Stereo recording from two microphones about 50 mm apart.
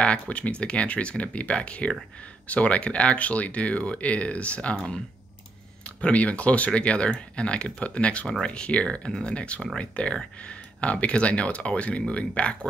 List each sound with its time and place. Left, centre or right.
0.0 s speech: left
5.9 s speech: left